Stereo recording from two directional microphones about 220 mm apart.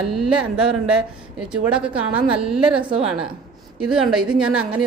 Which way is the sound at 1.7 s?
5° right (ahead or behind).